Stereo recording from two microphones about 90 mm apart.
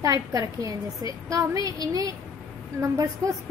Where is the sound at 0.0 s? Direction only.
40° right (ahead or behind).